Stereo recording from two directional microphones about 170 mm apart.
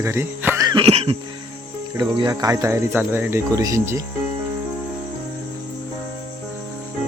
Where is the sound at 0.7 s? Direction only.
30° right (ahead or behind).